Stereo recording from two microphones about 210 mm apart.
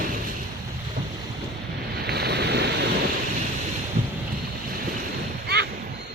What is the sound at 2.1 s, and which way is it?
Waves, 50° right (ahead or behind).